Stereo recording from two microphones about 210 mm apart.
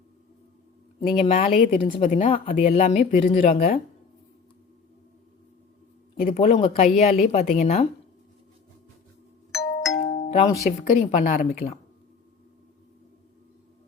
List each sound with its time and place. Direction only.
1.2 s speech: 30° left (ahead or behind)
1.5 s speech: 40° left (ahead or behind)
6.2 s speech: 30° left (ahead or behind)
9.5 s doorbell: centre (ahead or behind)
10.2 s music: 35° left (ahead or behind)
10.7 s speech: 35° left (ahead or behind)